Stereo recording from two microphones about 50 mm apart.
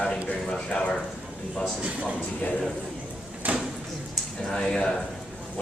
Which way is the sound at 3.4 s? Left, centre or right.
Right.